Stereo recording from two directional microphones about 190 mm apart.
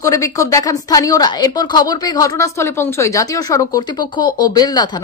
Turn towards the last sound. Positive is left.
turn(degrees=20)  # may be behind; listen again after turning